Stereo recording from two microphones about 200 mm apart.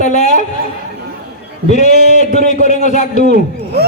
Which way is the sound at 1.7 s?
35° left (ahead or behind).